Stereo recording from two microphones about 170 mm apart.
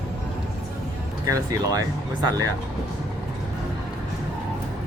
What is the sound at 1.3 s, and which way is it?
Speech, 20° right (ahead or behind).